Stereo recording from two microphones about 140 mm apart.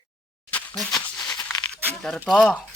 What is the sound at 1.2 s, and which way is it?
Tearing, 25° left (ahead or behind).